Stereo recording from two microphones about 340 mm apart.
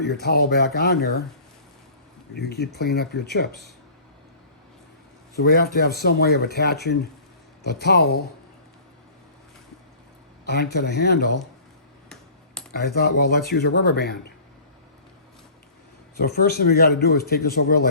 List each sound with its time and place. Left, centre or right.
0.0 s a man's voice: left
2.3 s a man's voice: left
5.4 s a man's voice: left
10.4 s a man's voice: left
12.7 s a man's voice: left
16.1 s a man's voice: left